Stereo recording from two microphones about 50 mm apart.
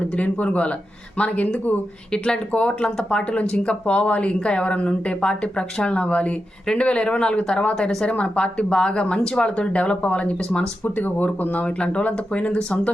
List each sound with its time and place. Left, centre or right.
0.0 s speech: left
2.1 s speech: centre
10.8 s speech: left
11.6 s speech: left